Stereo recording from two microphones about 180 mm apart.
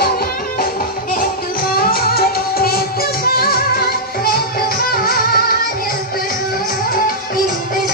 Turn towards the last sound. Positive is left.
turn(degrees=55)  # may be behind; listen again after turning